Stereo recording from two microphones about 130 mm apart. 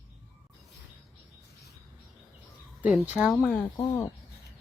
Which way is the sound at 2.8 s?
5° right (ahead or behind).